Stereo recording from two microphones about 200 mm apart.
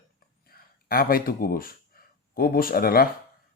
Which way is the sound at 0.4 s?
45° left (ahead or behind).